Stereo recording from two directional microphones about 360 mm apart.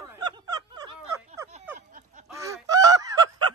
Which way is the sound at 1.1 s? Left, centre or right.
Centre.